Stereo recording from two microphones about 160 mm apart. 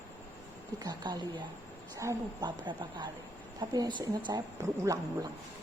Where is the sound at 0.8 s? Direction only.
25° right (ahead or behind).